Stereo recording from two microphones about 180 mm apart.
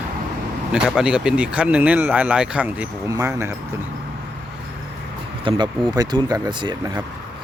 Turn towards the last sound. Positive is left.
turn(degrees=-25)  # may be behind; listen again after turning